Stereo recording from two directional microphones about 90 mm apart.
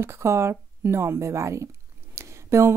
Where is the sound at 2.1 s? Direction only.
30° right (ahead or behind).